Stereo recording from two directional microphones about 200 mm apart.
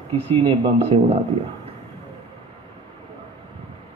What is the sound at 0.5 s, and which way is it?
Speech, 30° right (ahead or behind).